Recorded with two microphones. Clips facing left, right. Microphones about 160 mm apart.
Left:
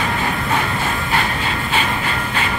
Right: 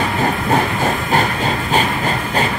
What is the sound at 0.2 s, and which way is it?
Train, 40° right (ahead or behind).